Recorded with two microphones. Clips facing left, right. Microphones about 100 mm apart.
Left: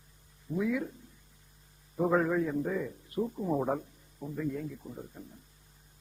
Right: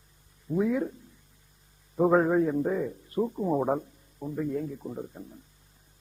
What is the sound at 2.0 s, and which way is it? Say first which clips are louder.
A man's voice: right 5 dB; 35° right (ahead or behind).